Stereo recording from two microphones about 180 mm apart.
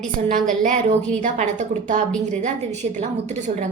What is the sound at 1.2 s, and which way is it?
A woman's voice, 45° right (ahead or behind).